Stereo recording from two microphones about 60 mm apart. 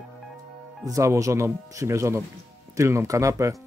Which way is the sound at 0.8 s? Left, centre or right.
Right.